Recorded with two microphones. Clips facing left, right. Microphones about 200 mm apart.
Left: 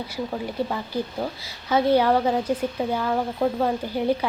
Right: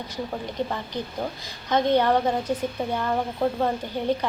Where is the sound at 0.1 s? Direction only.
10° left (ahead or behind).